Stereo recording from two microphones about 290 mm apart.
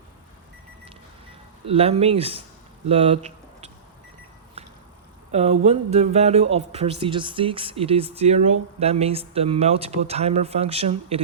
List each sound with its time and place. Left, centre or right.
1.6 s speech: centre
2.8 s a sound: centre
5.3 s speech: right